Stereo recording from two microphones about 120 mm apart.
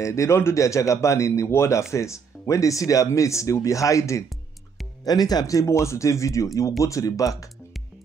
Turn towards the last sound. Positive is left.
turn(degrees=30)  # may be behind; listen again after turning